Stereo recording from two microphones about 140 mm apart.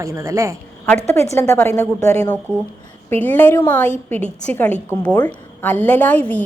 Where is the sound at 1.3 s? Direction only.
15° left (ahead or behind).